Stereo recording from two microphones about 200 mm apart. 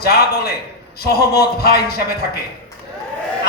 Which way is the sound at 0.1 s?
50° left (ahead or behind).